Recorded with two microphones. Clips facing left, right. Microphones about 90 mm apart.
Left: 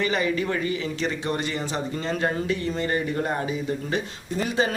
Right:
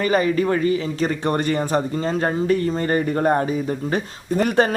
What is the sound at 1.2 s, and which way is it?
A man's voice, 50° right (ahead or behind).